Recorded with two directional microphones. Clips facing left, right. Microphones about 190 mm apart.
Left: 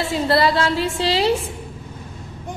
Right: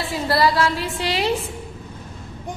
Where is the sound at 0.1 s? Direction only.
25° left (ahead or behind).